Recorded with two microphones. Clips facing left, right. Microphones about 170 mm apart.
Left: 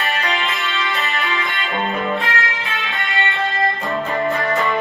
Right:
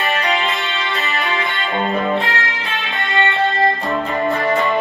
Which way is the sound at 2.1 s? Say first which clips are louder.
Right 2 dB; 20° right (ahead or behind).